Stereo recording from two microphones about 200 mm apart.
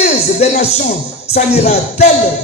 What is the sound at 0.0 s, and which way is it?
Speech, 35° left (ahead or behind).